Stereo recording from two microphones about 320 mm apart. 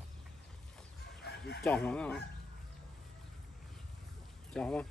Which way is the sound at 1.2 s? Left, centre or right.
Left.